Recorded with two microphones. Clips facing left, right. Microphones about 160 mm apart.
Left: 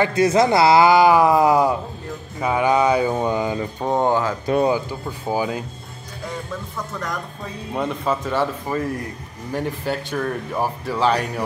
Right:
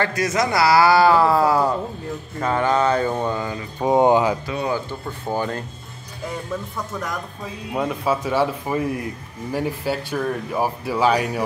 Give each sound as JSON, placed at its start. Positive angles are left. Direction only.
{"t": 0.1, "sound": "speech", "side_deg": 30}
{"t": 3.8, "sound": "speech", "side_deg": -15}
{"t": 4.6, "sound": "speech", "side_deg": 10}
{"t": 7.7, "sound": "speech", "side_deg": -5}